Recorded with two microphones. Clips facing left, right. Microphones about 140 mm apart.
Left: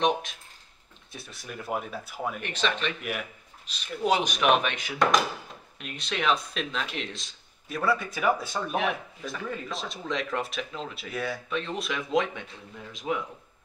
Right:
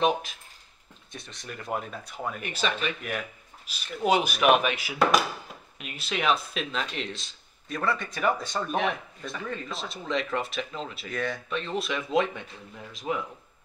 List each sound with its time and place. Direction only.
0.0 s speech: centre (ahead or behind)
2.4 s speech: 5° right (ahead or behind)